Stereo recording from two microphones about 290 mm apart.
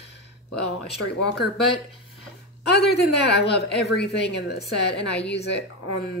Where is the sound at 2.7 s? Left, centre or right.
Left.